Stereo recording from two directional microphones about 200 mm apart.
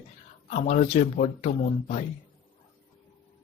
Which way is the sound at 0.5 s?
35° left (ahead or behind).